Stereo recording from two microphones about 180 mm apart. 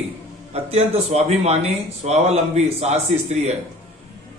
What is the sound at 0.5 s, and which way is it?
Speech, 35° right (ahead or behind).